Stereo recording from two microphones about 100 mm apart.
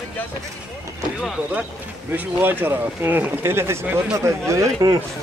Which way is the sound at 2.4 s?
20° right (ahead or behind).